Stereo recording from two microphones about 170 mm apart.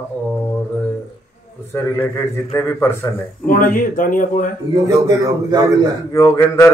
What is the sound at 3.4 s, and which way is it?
Speech, 55° left (ahead or behind).